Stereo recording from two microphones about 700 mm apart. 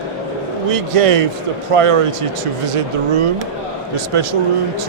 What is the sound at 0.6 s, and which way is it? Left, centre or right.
A man's voice, right.